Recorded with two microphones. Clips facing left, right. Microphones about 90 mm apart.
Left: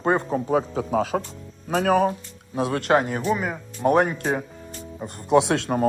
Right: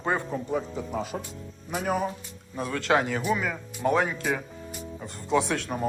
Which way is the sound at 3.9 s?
55° left (ahead or behind).